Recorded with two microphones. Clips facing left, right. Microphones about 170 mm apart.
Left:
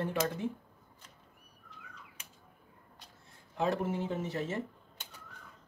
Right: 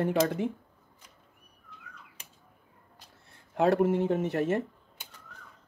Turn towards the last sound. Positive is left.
turn(degrees=-60)  # may be behind; listen again after turning